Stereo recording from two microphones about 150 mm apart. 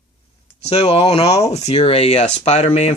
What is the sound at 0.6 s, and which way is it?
Speech, 45° left (ahead or behind).